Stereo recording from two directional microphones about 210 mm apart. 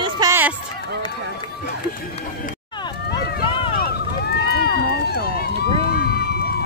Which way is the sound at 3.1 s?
50° left (ahead or behind).